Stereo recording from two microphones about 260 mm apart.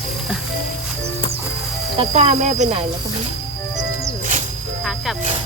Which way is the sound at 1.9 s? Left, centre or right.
Right.